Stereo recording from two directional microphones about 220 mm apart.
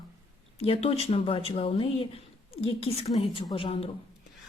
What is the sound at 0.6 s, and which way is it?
Speech, 25° left (ahead or behind).